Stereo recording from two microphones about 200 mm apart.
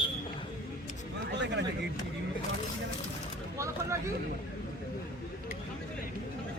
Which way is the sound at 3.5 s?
15° right (ahead or behind).